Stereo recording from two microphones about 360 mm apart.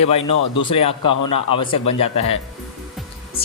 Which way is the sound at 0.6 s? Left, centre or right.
Centre.